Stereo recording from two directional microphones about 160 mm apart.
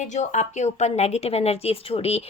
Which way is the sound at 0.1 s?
50° left (ahead or behind).